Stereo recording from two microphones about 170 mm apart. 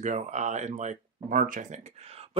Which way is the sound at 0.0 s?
45° right (ahead or behind).